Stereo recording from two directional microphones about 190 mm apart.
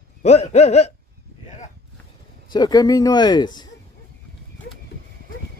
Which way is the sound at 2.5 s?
20° left (ahead or behind).